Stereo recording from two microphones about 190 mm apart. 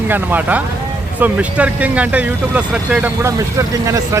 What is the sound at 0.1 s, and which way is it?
Speech, 10° right (ahead or behind).